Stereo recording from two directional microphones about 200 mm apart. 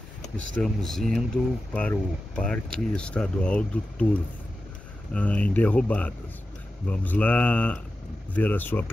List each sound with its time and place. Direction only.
0.6 s speech: centre (ahead or behind)
5.1 s speech: 5° left (ahead or behind)